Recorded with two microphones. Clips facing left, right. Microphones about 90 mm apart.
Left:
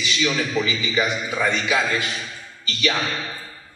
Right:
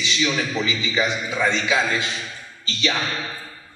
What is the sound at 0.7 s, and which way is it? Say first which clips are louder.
A man's voice: even; 25° right (ahead or behind).